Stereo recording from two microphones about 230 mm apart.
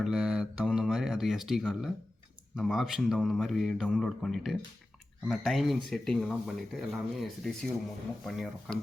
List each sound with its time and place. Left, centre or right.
0.0 s speech: centre